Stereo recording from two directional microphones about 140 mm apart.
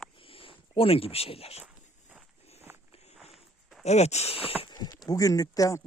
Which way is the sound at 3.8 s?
50° left (ahead or behind).